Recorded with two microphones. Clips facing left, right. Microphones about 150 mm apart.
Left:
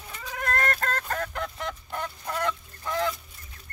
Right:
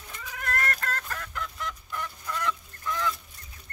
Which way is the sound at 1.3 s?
30° left (ahead or behind).